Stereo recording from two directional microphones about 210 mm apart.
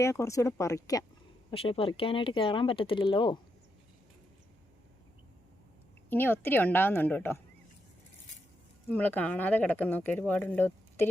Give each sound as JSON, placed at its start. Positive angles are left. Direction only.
{"t": 0.0, "sound": "speech", "side_deg": 15}
{"t": 1.5, "sound": "speech", "side_deg": 25}
{"t": 6.1, "sound": "speech", "side_deg": 10}
{"t": 8.9, "sound": "speech", "side_deg": 10}